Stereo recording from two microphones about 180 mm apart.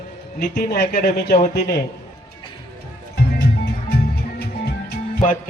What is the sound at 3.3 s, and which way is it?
Music, 65° left (ahead or behind).